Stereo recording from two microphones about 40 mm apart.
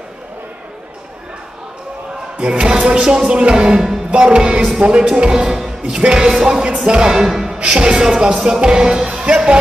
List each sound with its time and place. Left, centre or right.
2.3 s speech: right
3.5 s music: centre
4.1 s speech: right
7.2 s speech: centre
7.5 s speech: right
9.1 s music: right